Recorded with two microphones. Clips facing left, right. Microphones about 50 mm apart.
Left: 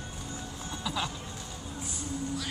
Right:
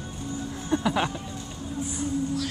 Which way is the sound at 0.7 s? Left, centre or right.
Right.